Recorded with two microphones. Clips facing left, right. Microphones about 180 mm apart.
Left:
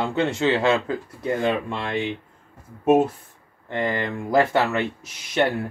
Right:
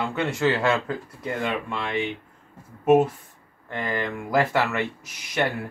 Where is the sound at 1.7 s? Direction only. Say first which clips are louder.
Left 1 dB; 35° left (ahead or behind).